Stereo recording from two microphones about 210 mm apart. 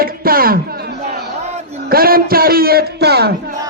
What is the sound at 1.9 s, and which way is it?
A woman's voice, 45° right (ahead or behind).